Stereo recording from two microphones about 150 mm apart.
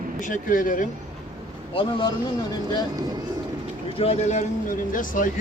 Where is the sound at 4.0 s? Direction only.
50° left (ahead or behind).